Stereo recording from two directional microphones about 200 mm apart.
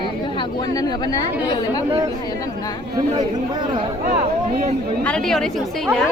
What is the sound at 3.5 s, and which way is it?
Speech, 20° right (ahead or behind).